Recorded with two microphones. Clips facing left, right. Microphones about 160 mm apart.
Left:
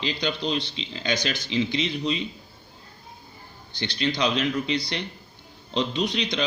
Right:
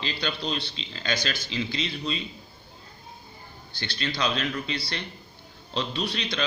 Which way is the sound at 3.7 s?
20° left (ahead or behind).